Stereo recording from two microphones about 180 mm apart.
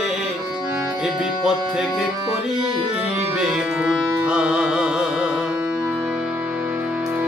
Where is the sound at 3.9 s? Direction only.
5° right (ahead or behind).